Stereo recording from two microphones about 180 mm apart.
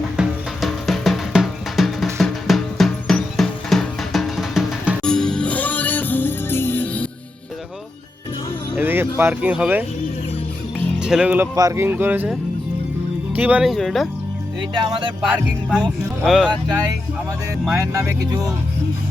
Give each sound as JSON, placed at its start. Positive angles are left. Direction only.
{"t": 0.2, "sound": "music", "side_deg": 0}
{"t": 8.7, "sound": "music", "side_deg": -10}
{"t": 9.1, "sound": "speech", "side_deg": -10}
{"t": 11.0, "sound": "speech", "side_deg": -5}
{"t": 11.5, "sound": "speech", "side_deg": -15}
{"t": 14.8, "sound": "speech", "side_deg": -25}
{"t": 15.4, "sound": "speech", "side_deg": -5}
{"t": 17.9, "sound": "speech", "side_deg": -20}